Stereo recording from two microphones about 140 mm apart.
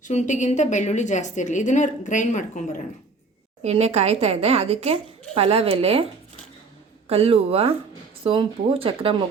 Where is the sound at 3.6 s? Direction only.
50° right (ahead or behind).